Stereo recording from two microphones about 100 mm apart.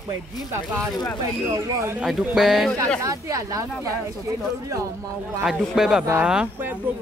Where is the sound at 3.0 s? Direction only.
35° right (ahead or behind).